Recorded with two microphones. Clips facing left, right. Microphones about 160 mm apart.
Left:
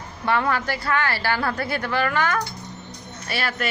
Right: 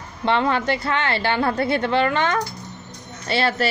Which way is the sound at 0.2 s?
25° right (ahead or behind).